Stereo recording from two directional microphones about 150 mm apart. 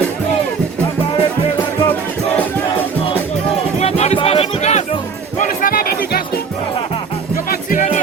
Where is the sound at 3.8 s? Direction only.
45° left (ahead or behind).